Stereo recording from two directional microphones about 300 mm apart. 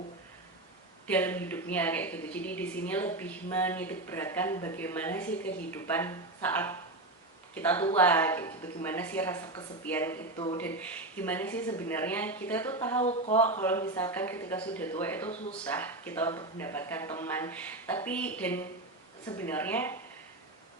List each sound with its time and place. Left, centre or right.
1.0 s a woman's voice: centre
10.6 s a woman's voice: centre
13.0 s speech: left
13.6 s a woman's voice: centre